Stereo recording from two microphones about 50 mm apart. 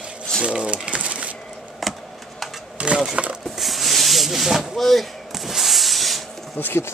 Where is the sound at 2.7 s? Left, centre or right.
Right.